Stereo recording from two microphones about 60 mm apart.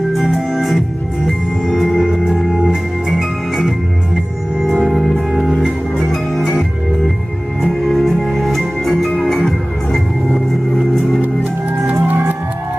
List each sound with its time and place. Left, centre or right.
0.1 s music: centre
1.6 s organ: centre
4.9 s music: centre
7.6 s music: centre
12.0 s music: right